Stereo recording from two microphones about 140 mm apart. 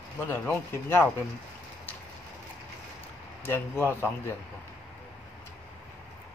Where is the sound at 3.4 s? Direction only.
15° left (ahead or behind).